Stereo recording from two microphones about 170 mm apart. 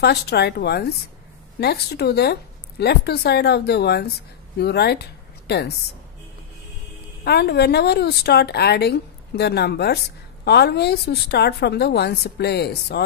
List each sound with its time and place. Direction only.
0.0 s speech: 75° left (ahead or behind)
7.2 s speech: 70° left (ahead or behind)